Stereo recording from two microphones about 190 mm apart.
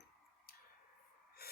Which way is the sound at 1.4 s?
55° left (ahead or behind).